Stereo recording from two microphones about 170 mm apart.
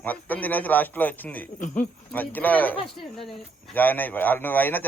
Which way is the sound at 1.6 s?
45° left (ahead or behind).